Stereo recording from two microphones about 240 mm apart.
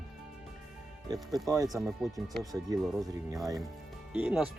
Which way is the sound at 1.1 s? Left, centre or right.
Centre.